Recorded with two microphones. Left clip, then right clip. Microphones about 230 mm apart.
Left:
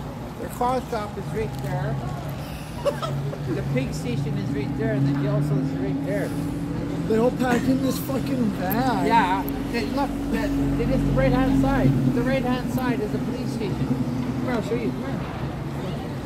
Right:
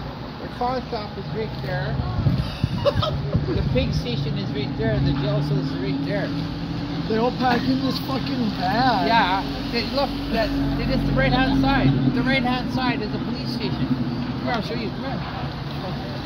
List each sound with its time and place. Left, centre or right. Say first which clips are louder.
2.8 s a sound: right 3 dB; centre
7.2 s speech: right 1 dB; centre
8.7 s speech: right 2 dB; centre
11.1 s speech: right 2 dB; right